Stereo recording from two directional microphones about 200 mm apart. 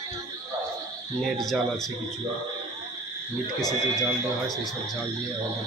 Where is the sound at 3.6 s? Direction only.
20° left (ahead or behind).